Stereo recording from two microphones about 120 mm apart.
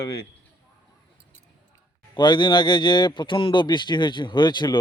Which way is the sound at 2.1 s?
40° left (ahead or behind).